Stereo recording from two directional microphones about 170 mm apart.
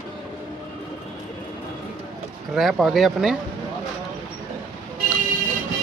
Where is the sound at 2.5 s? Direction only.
Centre (ahead or behind).